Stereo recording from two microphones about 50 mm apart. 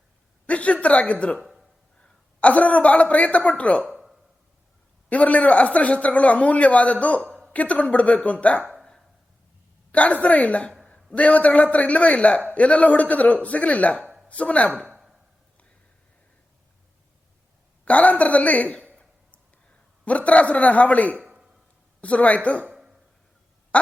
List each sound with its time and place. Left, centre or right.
0.4 s a woman's voice: left
2.4 s speech: left
3.8 s a sound: centre
5.0 s speech: left
9.9 s a man's voice: left
14.7 s speech: right
17.8 s speech: left
20.1 s speech: left
21.2 s a sound: right
22.0 s speech: left